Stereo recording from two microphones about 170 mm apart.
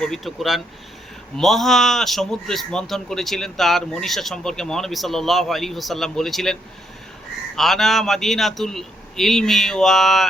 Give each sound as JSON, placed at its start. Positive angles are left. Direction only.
{"t": 0.0, "sound": "a man's voice", "side_deg": 0}